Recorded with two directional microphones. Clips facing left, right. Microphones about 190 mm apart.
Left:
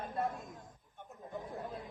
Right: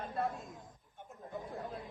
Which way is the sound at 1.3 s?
Centre (ahead or behind).